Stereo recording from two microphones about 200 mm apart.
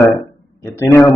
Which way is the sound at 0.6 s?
10° left (ahead or behind).